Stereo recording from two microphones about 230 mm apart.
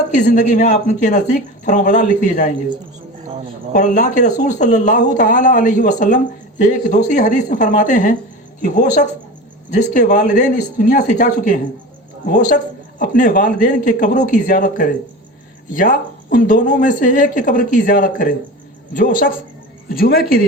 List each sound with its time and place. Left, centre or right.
0.2 s speech: left
3.7 s speech: left
13.0 s speech: left